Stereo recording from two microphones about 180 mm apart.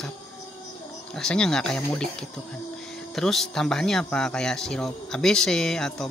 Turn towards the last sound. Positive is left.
turn(degrees=5)  # may be behind; listen again after turning